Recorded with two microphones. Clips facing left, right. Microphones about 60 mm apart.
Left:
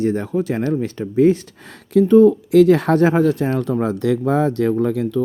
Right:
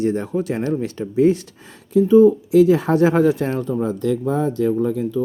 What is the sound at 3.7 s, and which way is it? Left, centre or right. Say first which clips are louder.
Speech: left 2 dB; left.